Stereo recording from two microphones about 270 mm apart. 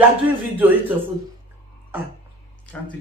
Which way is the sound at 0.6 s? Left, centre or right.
Centre.